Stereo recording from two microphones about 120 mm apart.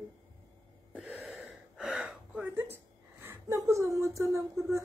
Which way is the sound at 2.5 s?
20° right (ahead or behind).